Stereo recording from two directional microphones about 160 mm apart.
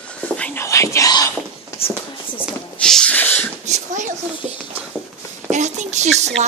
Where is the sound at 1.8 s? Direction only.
35° left (ahead or behind).